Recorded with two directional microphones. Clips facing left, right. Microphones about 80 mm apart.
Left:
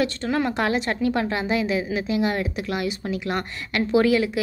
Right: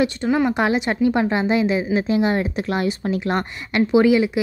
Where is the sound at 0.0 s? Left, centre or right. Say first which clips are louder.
Right 4 dB; centre; by 3.4 s right.